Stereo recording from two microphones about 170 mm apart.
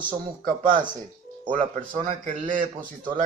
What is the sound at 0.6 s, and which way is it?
A man's voice, 50° right (ahead or behind).